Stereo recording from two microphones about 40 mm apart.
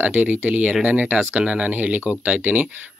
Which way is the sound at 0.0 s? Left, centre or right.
Right.